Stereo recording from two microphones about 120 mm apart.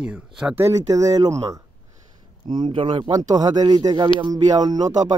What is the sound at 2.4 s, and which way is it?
Speech, 40° right (ahead or behind).